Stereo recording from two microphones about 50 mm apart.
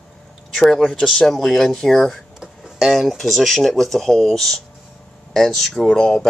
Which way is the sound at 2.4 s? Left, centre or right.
Centre.